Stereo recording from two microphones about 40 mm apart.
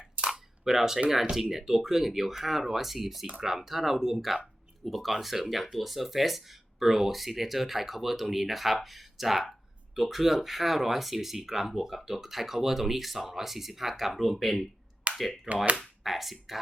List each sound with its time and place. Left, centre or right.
0.8 s speech: centre
15.1 s a sound: right
16.0 s speech: centre